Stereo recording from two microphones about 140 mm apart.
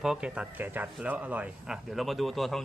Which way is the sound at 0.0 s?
5° right (ahead or behind).